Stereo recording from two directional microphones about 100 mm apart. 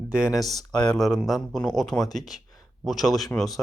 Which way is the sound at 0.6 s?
45° left (ahead or behind).